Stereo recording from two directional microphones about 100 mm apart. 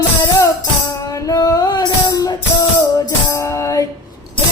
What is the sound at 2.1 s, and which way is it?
Music, 35° left (ahead or behind).